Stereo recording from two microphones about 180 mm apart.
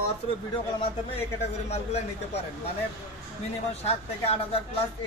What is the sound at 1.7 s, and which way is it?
Speech, 35° left (ahead or behind).